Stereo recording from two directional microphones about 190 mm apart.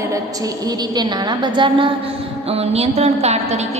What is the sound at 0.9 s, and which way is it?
A woman's voice, 25° right (ahead or behind).